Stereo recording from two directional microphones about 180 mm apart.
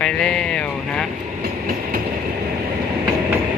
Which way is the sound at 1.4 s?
55° right (ahead or behind).